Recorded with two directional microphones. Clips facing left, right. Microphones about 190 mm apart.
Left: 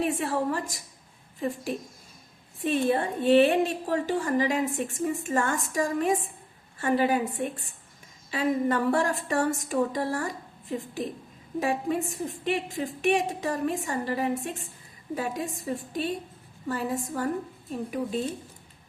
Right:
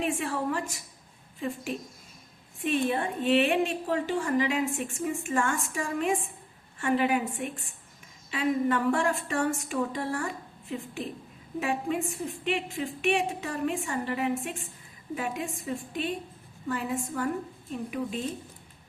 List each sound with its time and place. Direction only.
0.0 s a woman's voice: 40° left (ahead or behind)
2.6 s a woman's voice: 40° left (ahead or behind)